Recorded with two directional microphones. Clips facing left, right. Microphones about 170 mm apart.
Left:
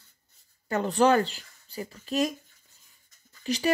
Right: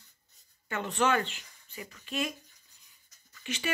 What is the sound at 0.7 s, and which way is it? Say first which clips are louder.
Speech: left 7 dB; 35° left (ahead or behind).